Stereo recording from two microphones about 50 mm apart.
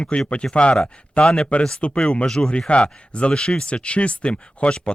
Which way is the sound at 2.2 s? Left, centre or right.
Centre.